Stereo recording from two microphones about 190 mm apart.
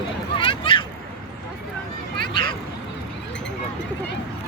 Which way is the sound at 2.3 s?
25° left (ahead or behind).